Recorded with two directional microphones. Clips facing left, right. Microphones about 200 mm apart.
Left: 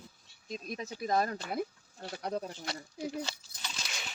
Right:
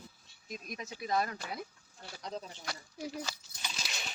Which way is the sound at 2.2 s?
60° left (ahead or behind).